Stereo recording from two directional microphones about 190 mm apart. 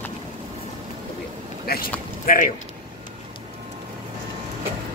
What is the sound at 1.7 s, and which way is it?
Speech, 55° left (ahead or behind).